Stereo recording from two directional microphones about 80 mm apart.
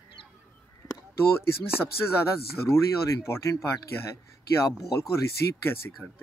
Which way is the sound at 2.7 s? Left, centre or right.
Left.